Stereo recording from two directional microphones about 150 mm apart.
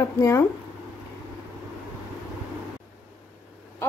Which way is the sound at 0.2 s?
20° left (ahead or behind).